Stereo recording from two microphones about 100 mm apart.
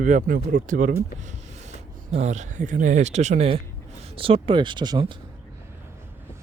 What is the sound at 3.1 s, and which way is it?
Speech, 90° right.